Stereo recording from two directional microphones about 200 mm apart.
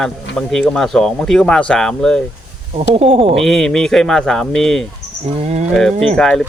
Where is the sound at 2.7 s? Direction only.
30° right (ahead or behind).